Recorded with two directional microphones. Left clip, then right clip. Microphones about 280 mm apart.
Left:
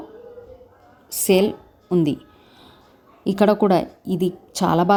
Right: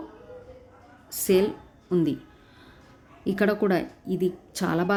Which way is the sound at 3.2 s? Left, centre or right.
Centre.